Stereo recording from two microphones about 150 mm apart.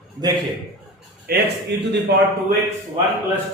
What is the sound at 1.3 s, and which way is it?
Speech, 90° right.